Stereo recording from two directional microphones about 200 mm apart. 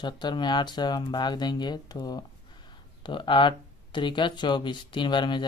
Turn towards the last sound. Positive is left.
turn(degrees=25)  # may be behind; listen again after turning